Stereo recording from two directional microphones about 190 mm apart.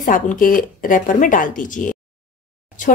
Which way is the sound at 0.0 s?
45° left (ahead or behind).